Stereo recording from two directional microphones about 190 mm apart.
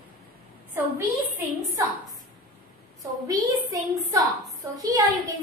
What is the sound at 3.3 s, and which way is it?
A woman's voice, 20° right (ahead or behind).